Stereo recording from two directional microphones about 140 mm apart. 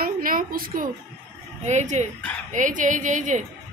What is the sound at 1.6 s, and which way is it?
Speech, 55° right (ahead or behind).